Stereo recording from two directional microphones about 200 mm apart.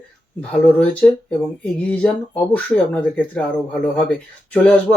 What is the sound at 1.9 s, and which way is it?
Speech, 5° left (ahead or behind).